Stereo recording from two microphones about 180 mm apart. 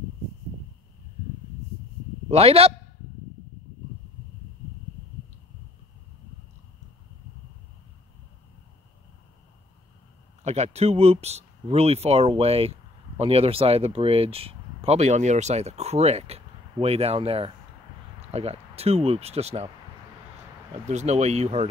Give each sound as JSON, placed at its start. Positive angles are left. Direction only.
{"t": 2.2, "sound": "a man's voice", "side_deg": -35}
{"t": 10.4, "sound": "speech", "side_deg": -35}
{"t": 20.8, "sound": "speech", "side_deg": -40}